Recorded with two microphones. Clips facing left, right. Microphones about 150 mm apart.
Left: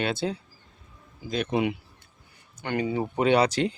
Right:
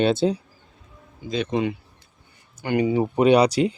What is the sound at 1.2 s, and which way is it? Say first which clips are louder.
Speech: right 2 dB; 5° left (ahead or behind).